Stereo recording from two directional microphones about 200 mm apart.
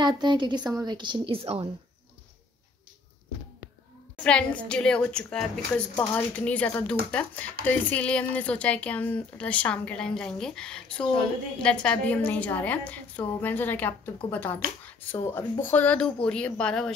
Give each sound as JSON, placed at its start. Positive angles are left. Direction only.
{"t": 0.0, "sound": "a woman's voice", "side_deg": -20}
{"t": 4.2, "sound": "a woman's voice", "side_deg": 5}